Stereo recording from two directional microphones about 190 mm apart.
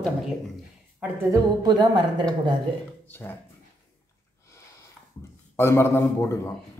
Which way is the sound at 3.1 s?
10° left (ahead or behind).